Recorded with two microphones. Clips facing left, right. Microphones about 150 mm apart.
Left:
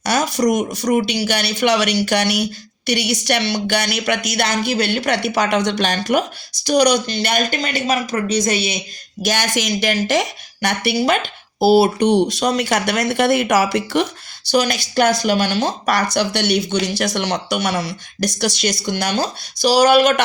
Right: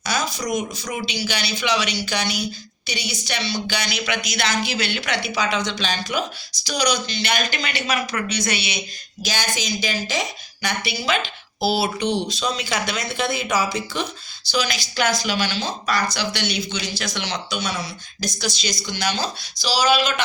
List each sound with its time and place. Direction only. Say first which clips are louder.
0.0 s speech: left 8 dB; 70° left (ahead or behind)
0.9 s speech: left 10 dB; 55° left (ahead or behind)
9.2 s a woman's voice: left 6 dB; 70° left (ahead or behind)
14.5 s speech: left 7 dB; 55° left (ahead or behind)